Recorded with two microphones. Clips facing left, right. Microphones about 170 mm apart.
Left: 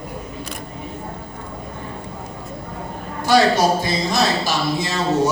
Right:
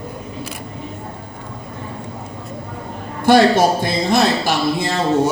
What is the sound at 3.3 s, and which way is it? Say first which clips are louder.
A man's voice: right 3 dB; 55° right (ahead or behind).